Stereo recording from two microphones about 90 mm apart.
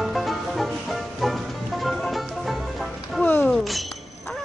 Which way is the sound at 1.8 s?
Centre (ahead or behind).